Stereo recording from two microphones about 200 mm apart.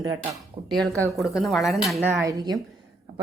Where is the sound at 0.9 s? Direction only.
15° right (ahead or behind).